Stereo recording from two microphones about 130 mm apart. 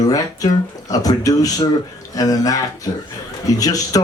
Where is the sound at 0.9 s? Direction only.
25° left (ahead or behind).